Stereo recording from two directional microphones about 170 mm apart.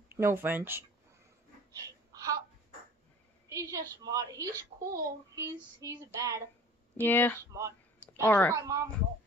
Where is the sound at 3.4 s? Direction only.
20° right (ahead or behind).